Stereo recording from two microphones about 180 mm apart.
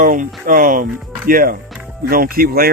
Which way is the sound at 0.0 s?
50° right (ahead or behind).